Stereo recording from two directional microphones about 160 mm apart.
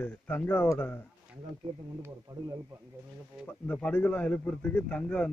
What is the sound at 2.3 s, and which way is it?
Speech, 25° right (ahead or behind).